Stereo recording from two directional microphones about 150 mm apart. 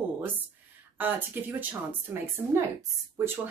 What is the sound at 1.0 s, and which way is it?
A woman's voice, 10° right (ahead or behind).